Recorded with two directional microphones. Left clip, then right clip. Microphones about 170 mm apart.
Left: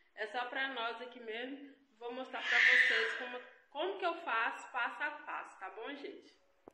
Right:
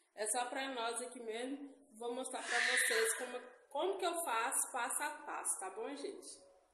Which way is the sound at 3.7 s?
20° right (ahead or behind).